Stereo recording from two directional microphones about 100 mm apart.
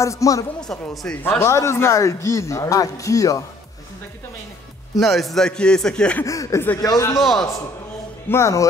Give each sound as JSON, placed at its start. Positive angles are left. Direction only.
{"t": 0.0, "sound": "a man's voice", "side_deg": 30}
{"t": 0.6, "sound": "speech", "side_deg": 5}
{"t": 1.4, "sound": "a man's voice", "side_deg": 30}
{"t": 4.9, "sound": "a man's voice", "side_deg": 0}
{"t": 6.2, "sound": "a man's voice", "side_deg": 35}
{"t": 7.2, "sound": "a man's voice", "side_deg": 0}
{"t": 8.3, "sound": "speech", "side_deg": 30}